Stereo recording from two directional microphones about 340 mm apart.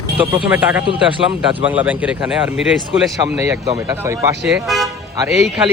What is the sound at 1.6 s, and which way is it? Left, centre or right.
A man's voice, centre.